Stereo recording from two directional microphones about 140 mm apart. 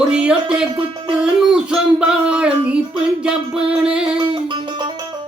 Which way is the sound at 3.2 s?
5° right (ahead or behind).